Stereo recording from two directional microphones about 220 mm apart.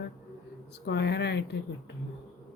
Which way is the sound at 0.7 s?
50° left (ahead or behind).